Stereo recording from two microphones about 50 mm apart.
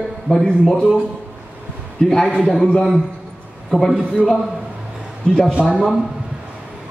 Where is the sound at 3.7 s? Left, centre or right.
Centre.